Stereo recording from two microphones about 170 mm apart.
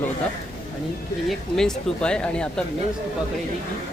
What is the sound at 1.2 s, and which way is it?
Speech, 5° left (ahead or behind).